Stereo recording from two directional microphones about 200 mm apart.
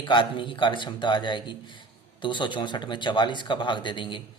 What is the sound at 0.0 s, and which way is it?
Speech, 25° left (ahead or behind).